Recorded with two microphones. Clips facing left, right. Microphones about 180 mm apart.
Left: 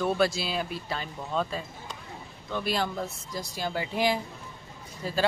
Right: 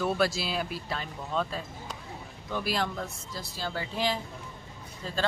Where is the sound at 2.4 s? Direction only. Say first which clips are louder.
Left 1 dB; 10° right (ahead or behind).